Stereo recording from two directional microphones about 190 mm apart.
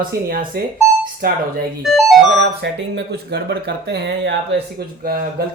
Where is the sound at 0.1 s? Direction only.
50° right (ahead or behind).